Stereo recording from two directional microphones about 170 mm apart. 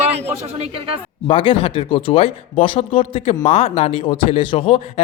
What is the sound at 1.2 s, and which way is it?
A man's voice, 30° left (ahead or behind).